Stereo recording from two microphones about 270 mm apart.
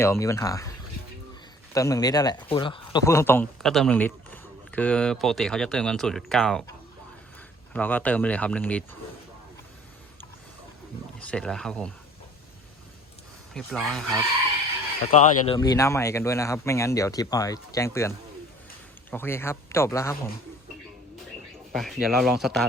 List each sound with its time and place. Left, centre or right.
0.0 s speech: centre
1.7 s speech: centre
7.7 s speech: centre
11.2 s speech: centre
13.5 s speech: centre
15.1 s speech: left
15.5 s speech: centre
19.1 s speech: centre
21.7 s speech: centre